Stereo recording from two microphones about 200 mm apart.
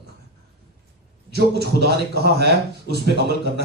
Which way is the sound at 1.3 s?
55° right (ahead or behind).